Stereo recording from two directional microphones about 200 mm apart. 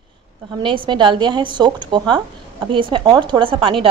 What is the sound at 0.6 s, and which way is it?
A woman's voice, 25° right (ahead or behind).